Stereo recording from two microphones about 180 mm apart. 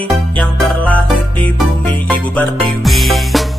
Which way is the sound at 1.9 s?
10° left (ahead or behind).